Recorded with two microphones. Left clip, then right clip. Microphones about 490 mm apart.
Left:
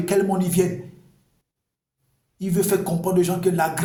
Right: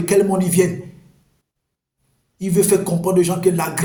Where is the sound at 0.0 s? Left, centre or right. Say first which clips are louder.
Right 5 dB; left.